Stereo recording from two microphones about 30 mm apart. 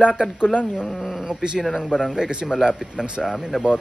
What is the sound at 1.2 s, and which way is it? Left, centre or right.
Speech, right.